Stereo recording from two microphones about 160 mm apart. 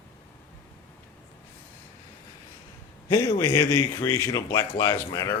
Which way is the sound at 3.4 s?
15° left (ahead or behind).